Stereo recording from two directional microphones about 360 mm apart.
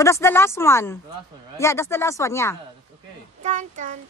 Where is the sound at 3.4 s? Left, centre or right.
Centre.